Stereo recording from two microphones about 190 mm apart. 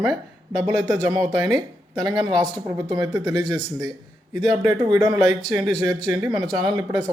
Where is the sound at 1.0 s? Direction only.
20° right (ahead or behind).